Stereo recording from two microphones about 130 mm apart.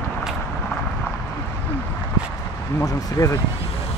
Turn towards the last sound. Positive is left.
turn(degrees=25)  # may be behind; listen again after turning